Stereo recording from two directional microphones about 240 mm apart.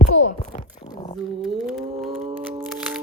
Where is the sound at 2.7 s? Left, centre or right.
Centre.